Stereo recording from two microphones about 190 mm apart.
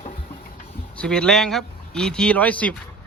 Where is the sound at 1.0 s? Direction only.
5° left (ahead or behind).